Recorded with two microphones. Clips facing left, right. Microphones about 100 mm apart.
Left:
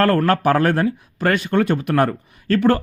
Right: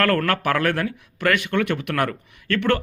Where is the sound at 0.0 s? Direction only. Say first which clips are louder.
Left 4 dB; 35° left (ahead or behind).